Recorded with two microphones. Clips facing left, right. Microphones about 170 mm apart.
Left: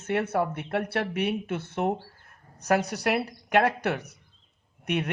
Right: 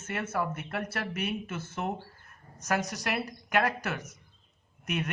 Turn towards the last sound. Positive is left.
turn(degrees=65)  # may be behind; listen again after turning